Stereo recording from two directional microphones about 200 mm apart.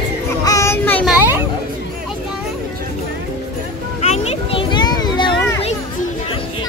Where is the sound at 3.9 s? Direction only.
35° left (ahead or behind).